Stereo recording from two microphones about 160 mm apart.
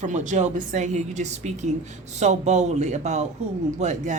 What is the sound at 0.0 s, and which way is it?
A woman's voice, 50° right (ahead or behind).